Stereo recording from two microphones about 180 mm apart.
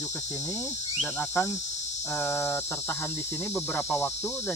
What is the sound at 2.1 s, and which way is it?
Speech, 15° left (ahead or behind).